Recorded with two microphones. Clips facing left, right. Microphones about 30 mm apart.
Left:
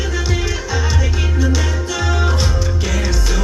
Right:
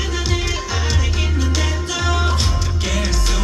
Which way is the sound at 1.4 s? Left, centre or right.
Right.